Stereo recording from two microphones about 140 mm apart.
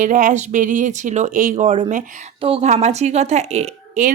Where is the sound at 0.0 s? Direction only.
65° right (ahead or behind).